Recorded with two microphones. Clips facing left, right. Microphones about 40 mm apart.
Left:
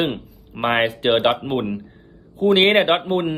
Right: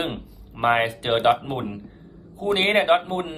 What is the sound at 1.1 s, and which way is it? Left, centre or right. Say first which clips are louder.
Speech: right 1 dB; left.